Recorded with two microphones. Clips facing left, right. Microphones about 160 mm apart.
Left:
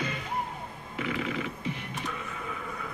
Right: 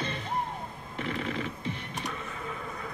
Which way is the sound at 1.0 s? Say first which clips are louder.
Left 1 dB; 40° right (ahead or behind).